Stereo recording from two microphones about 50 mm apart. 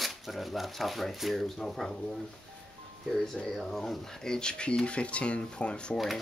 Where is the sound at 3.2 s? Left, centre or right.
Centre.